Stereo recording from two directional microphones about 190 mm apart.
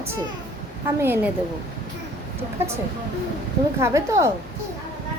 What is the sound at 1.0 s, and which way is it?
Speech, 10° right (ahead or behind).